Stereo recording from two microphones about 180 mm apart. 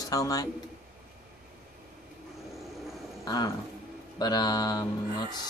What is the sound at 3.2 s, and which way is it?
Speech, 20° left (ahead or behind).